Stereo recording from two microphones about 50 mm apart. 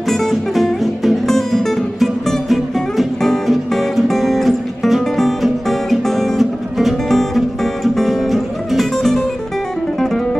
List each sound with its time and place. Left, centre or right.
0.1 s music: centre